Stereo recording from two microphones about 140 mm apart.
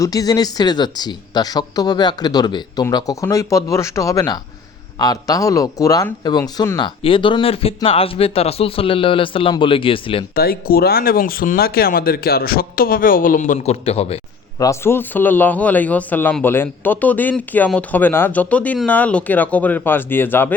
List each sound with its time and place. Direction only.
0.0 s speech: 25° left (ahead or behind)
10.3 s speech: 90° left; by 14.2 s 45° left (ahead or behind)
14.6 s a man's voice: 20° left (ahead or behind)